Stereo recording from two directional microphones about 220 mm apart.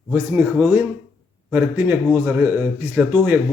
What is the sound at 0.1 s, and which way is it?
Speech, 5° right (ahead or behind).